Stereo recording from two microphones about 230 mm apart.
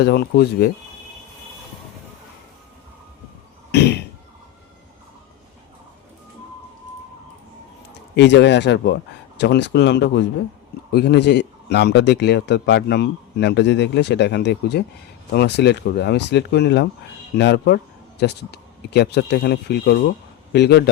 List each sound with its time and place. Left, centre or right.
0.0 s a man's voice: left
3.7 s cough: left
8.1 s a man's voice: left